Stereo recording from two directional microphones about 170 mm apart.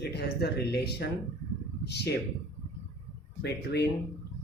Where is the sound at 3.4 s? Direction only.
75° left (ahead or behind).